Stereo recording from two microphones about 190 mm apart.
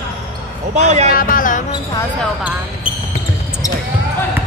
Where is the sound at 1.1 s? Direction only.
45° left (ahead or behind).